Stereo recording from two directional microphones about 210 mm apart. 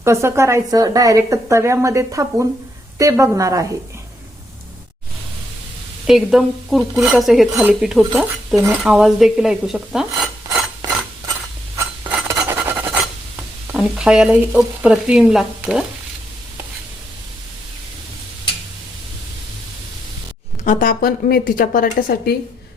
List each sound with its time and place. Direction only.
0.0 s speech: 15° right (ahead or behind)
6.1 s speech: centre (ahead or behind)
8.6 s dishes: 5° right (ahead or behind)
12.0 s filing: 5° right (ahead or behind)
13.7 s speech: 5° right (ahead or behind)
20.7 s a woman's voice: 40° left (ahead or behind)